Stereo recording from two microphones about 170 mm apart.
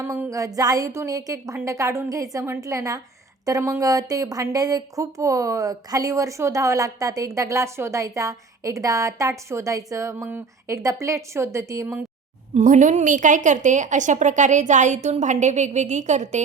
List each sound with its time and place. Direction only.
0.0 s a woman's voice: 15° right (ahead or behind)
12.5 s a woman's voice: 45° right (ahead or behind)